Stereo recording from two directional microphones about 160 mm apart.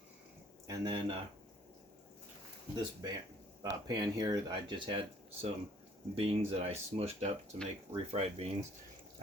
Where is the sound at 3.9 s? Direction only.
25° right (ahead or behind).